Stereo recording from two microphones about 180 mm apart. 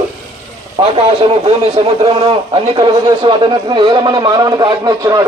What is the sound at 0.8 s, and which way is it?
A man's voice, 25° right (ahead or behind).